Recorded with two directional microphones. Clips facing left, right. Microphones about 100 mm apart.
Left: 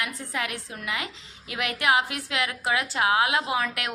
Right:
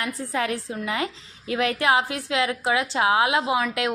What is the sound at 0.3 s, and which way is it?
A woman's voice, 35° right (ahead or behind).